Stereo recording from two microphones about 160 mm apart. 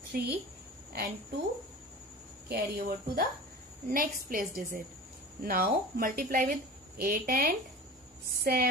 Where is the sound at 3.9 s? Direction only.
60° right (ahead or behind).